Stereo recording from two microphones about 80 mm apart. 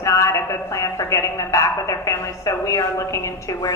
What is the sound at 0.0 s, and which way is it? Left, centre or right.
A woman's voice, left.